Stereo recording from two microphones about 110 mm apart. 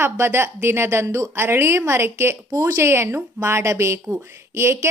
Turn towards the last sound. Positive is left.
turn(degrees=-25)  # may be behind; listen again after turning